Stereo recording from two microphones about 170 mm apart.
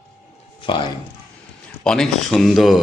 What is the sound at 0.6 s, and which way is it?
Speech, 30° left (ahead or behind).